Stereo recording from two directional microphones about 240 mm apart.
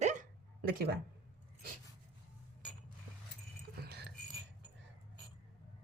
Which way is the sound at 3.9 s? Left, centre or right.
Right.